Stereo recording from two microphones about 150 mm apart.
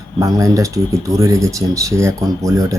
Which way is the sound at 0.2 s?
20° right (ahead or behind).